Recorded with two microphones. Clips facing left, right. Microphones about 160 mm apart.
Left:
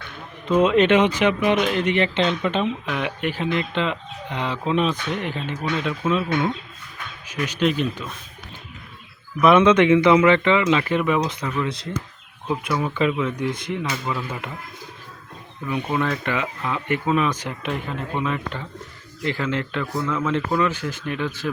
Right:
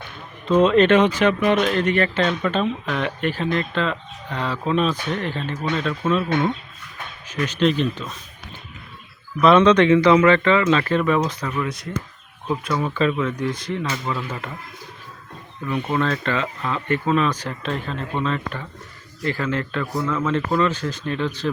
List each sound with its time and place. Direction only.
0.4 s speech: 15° left (ahead or behind)
7.4 s speech: 10° left (ahead or behind)
9.4 s speech: 15° left (ahead or behind)
11.6 s speech: 25° left (ahead or behind)
12.5 s speech: 10° left (ahead or behind)
15.7 s speech: 10° left (ahead or behind)
19.8 s speech: centre (ahead or behind)
20.1 s speech: 15° left (ahead or behind)